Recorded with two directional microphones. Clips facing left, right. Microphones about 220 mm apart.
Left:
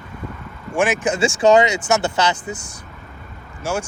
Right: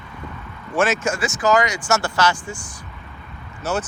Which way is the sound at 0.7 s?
15° left (ahead or behind).